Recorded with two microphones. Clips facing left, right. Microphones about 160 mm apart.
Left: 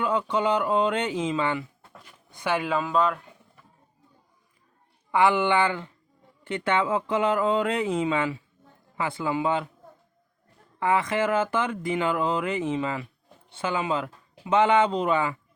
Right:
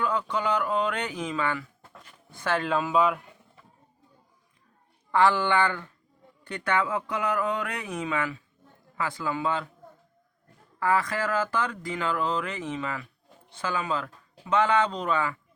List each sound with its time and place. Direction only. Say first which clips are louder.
0.0 s speech: left 3 dB; 25° left (ahead or behind)
1.9 s a sound: even; 10° left (ahead or behind)
2.7 s speech: right 2 dB; 5° right (ahead or behind)
5.1 s speech: left 1 dB; 15° left (ahead or behind)
10.8 s speech: left 2 dB; 20° left (ahead or behind)